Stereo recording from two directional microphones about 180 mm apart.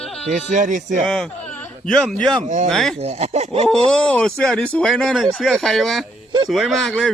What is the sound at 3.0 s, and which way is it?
Speech, 35° right (ahead or behind).